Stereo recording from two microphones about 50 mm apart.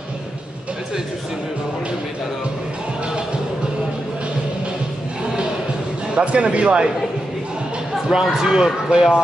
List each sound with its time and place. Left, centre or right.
6.1 s speech: right
7.9 s speech: centre